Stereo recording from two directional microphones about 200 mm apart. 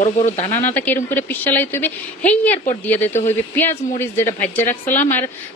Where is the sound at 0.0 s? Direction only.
35° left (ahead or behind).